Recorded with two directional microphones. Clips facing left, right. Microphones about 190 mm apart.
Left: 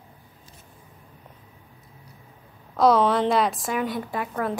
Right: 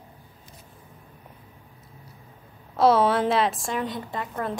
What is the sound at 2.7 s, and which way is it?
A woman's voice, 5° right (ahead or behind).